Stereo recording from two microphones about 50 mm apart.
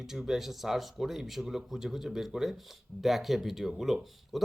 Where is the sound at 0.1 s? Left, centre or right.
Centre.